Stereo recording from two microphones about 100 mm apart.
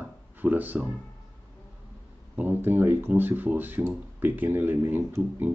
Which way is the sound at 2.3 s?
20° right (ahead or behind).